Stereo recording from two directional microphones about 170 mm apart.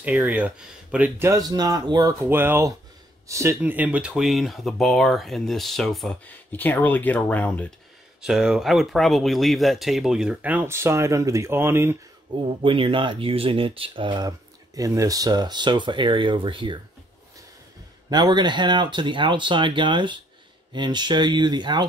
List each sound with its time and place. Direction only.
0.0 s speech: 10° right (ahead or behind)
1.3 s speech: 20° right (ahead or behind); by 7.7 s 10° left (ahead or behind)
8.2 s speech: 5° right (ahead or behind)
12.3 s speech: 30° right (ahead or behind)
18.1 s speech: 25° right (ahead or behind)